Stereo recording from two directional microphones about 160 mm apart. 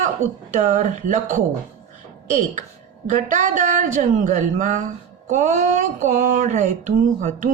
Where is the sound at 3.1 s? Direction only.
55° right (ahead or behind).